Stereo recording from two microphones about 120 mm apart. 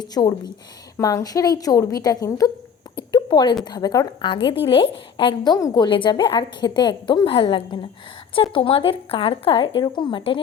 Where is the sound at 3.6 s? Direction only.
35° left (ahead or behind).